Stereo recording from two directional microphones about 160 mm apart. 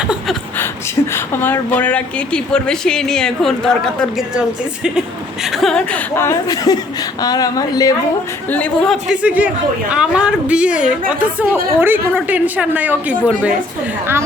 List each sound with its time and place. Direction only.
1.1 s a woman's voice: 15° left (ahead or behind)
6.1 s speech: 20° left (ahead or behind)
8.4 s a woman's voice: 10° left (ahead or behind); by 13.6 s 5° right (ahead or behind)